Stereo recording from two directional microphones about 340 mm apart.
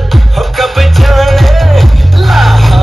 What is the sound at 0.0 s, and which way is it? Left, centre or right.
Music, centre.